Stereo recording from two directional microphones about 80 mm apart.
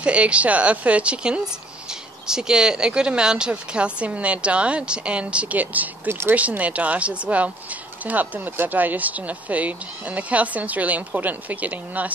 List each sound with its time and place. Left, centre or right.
0.0 s a woman's voice: centre
6.3 s a woman's voice: centre